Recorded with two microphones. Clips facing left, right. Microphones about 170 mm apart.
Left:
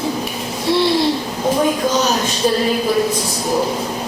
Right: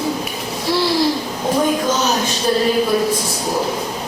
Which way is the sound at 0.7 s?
25° left (ahead or behind).